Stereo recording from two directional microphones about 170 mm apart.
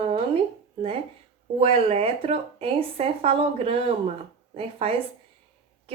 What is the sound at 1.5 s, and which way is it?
A woman's voice, 35° right (ahead or behind).